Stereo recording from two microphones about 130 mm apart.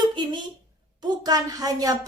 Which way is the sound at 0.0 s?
35° right (ahead or behind).